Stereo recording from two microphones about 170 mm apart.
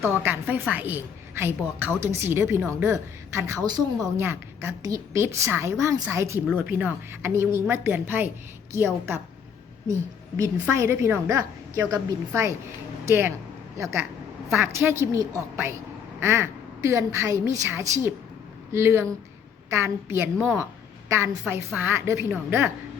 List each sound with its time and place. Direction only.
0.0 s a woman's voice: 15° right (ahead or behind)
10.3 s a woman's voice: 15° right (ahead or behind)
14.6 s a woman's voice: 15° right (ahead or behind)